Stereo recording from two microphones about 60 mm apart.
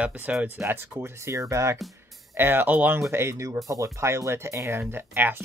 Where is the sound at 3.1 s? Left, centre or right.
Right.